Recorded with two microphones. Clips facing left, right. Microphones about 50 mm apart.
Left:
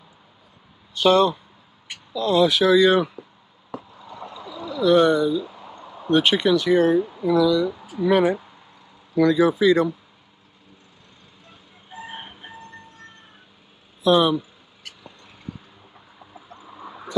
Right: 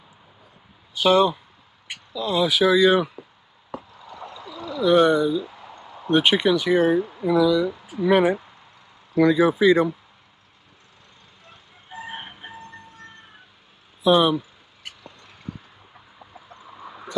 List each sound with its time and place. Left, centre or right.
0.9 s speech: centre
4.7 s speech: centre
11.9 s chicken: centre
14.0 s speech: centre
16.7 s a sound: centre